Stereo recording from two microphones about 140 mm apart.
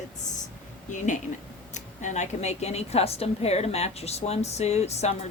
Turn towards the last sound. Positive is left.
turn(degrees=50)  # may be behind; listen again after turning